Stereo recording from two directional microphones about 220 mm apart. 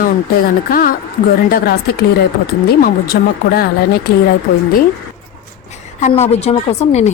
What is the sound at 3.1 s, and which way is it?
Speech, 45° left (ahead or behind).